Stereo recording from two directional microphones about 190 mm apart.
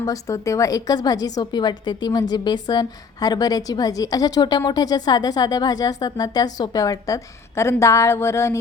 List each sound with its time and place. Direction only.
0.0 s a woman's voice: 15° left (ahead or behind)